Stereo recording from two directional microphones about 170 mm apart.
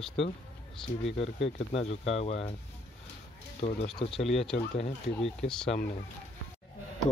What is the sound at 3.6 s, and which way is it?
Speech, 35° left (ahead or behind).